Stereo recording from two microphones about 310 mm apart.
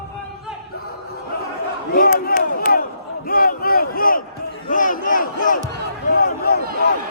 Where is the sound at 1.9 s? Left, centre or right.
Left.